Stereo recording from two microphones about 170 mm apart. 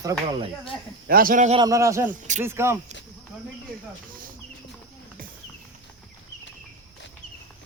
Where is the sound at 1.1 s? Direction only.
60° right (ahead or behind).